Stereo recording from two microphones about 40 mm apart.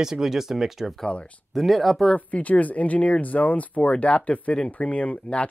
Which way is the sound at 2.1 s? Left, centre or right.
Left.